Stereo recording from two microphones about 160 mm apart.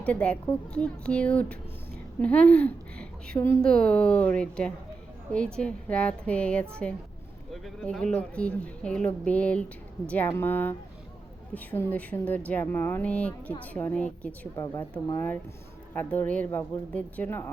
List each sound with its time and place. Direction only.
0.0 s a woman's voice: 10° left (ahead or behind)
14.5 s a woman's voice: 25° left (ahead or behind)
15.1 s a woman's voice: 15° left (ahead or behind)